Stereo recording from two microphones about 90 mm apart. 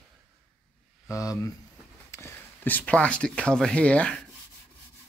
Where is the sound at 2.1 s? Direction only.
35° left (ahead or behind).